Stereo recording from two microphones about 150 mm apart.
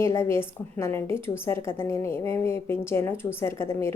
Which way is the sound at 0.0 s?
15° left (ahead or behind).